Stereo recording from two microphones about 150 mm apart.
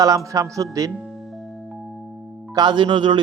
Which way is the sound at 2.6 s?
30° right (ahead or behind).